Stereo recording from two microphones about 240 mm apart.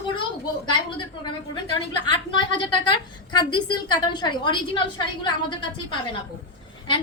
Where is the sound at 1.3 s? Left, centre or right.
Centre.